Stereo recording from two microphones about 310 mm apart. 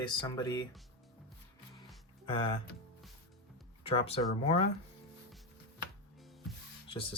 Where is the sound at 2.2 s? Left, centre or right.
Centre.